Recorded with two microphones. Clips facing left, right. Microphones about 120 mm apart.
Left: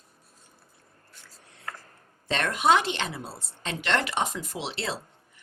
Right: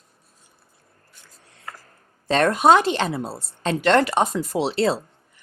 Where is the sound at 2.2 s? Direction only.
40° right (ahead or behind).